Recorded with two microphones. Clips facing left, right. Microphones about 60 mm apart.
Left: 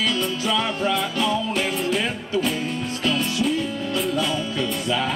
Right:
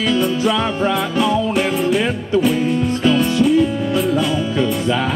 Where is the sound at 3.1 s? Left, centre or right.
Centre.